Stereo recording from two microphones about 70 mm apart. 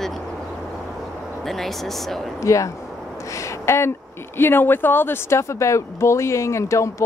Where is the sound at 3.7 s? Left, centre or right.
Left.